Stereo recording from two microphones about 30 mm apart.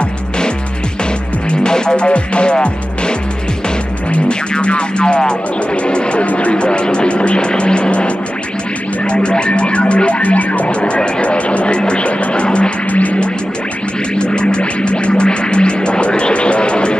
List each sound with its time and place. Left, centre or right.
1.5 s music: left
2.0 s music: left
4.3 s music: left
6.2 s speech: left
6.5 s music: left
7.3 s vehicle: left
9.0 s music: left
10.8 s music: left
12.9 s music: left
14.1 s music: left